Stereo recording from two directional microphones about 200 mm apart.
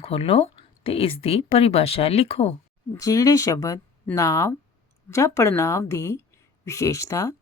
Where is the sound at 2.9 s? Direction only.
15° left (ahead or behind).